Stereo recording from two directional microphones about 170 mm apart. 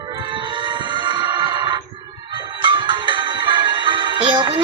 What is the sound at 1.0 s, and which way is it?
Music, 25° right (ahead or behind).